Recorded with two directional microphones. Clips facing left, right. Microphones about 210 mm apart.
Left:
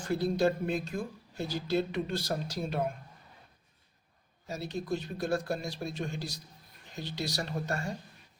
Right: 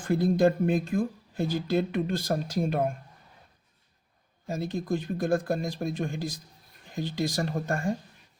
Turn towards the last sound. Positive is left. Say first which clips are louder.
# right 6 dB
turn(degrees=-50)  # may be behind; listen again after turning